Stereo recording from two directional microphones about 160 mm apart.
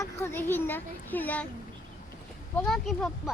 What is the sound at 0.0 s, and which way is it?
Speech, 15° left (ahead or behind).